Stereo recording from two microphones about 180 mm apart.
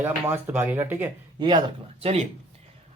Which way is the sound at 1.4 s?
25° right (ahead or behind).